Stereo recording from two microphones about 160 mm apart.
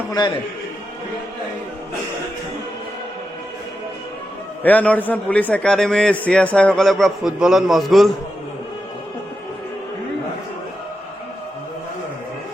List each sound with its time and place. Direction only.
0.1 s a man's voice: 25° left (ahead or behind)
4.6 s a man's voice: 10° left (ahead or behind)